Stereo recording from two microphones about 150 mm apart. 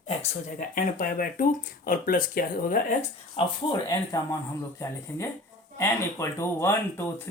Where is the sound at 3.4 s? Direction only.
40° left (ahead or behind).